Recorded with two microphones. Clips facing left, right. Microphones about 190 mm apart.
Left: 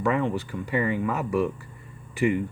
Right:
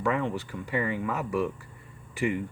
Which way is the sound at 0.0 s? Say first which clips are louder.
Left 3 dB; 20° left (ahead or behind).